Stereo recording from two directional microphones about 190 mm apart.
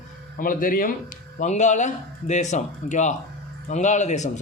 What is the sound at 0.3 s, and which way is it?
Speech, 45° left (ahead or behind).